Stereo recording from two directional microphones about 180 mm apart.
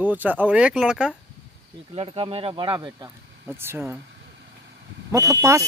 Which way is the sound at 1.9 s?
30° right (ahead or behind).